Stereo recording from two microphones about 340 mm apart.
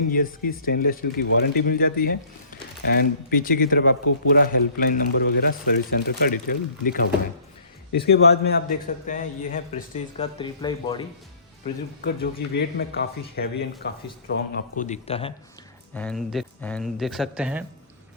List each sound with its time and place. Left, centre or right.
0.1 s speech: left
11.6 s speech: left
16.0 s speech: centre